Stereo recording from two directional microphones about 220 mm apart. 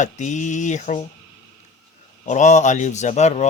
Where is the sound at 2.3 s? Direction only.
30° left (ahead or behind).